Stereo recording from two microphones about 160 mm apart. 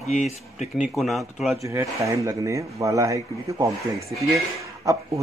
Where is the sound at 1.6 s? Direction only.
20° right (ahead or behind).